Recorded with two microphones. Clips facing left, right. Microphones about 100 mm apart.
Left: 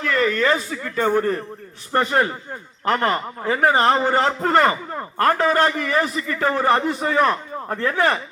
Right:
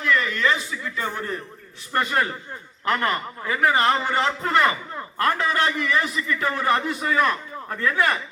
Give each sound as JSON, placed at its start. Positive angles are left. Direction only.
{"t": 0.0, "sound": "a man's voice", "side_deg": 40}